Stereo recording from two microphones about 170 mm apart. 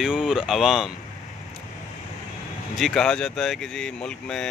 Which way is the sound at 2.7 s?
Centre (ahead or behind).